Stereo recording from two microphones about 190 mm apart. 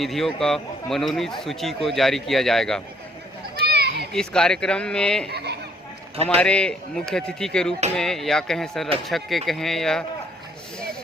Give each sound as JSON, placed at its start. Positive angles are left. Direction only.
{"t": 0.0, "sound": "speech", "side_deg": 0}
{"t": 3.5, "sound": "children playing", "side_deg": -55}
{"t": 4.1, "sound": "speech", "side_deg": 5}
{"t": 5.3, "sound": "speech", "side_deg": -60}
{"t": 6.2, "sound": "speech", "side_deg": 5}